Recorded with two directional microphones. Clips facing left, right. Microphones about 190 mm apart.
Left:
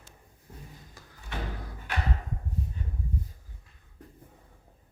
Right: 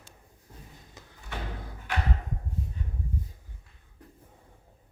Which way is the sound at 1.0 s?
20° right (ahead or behind).